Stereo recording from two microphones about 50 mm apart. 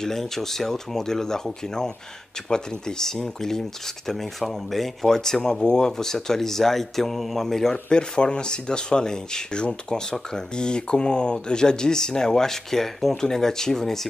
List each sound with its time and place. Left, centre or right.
0.0 s speech: centre
7.7 s speech: centre